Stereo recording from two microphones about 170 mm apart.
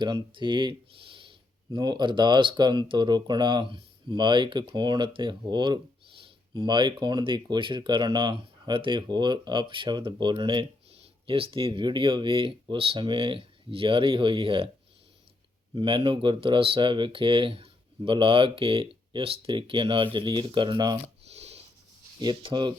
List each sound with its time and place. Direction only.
0.0 s speech: 30° right (ahead or behind)
15.7 s speech: 30° right (ahead or behind)
21.2 s a sound: 40° right (ahead or behind)
22.2 s speech: 25° right (ahead or behind)